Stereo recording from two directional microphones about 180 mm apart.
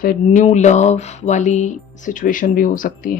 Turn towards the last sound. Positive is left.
turn(degrees=50)  # may be behind; listen again after turning